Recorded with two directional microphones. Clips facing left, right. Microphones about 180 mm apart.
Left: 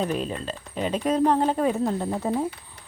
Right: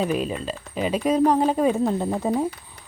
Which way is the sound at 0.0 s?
10° right (ahead or behind).